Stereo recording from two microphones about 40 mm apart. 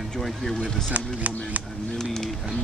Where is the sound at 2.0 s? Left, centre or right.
Centre.